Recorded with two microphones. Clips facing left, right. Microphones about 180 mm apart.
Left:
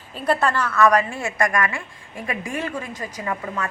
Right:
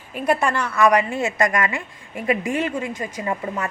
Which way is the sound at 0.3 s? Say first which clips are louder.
Even; 15° right (ahead or behind).